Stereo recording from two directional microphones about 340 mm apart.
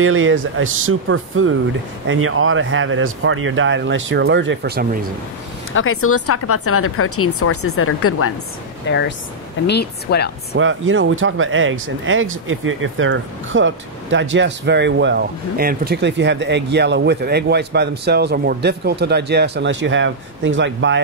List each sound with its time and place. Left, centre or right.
0.0 s speech: right
5.7 s speech: left
10.5 s speech: right